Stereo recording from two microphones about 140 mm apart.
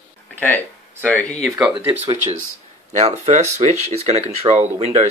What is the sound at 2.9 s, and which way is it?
Speech, 50° right (ahead or behind).